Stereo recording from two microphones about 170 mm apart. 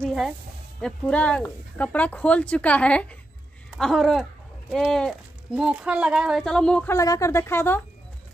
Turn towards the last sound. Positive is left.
turn(degrees=15)  # may be behind; listen again after turning